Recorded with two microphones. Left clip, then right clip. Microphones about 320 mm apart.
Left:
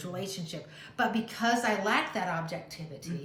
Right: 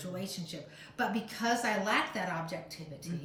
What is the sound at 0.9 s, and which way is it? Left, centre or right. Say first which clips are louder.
A woman's voice: left 4 dB; centre.